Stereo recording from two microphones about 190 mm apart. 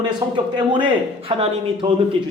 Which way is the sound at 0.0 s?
25° right (ahead or behind).